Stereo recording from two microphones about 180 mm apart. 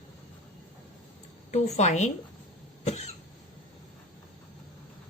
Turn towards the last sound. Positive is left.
turn(degrees=40)  # may be behind; listen again after turning